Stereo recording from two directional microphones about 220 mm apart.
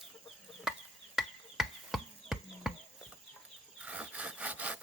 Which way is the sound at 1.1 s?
Centre (ahead or behind).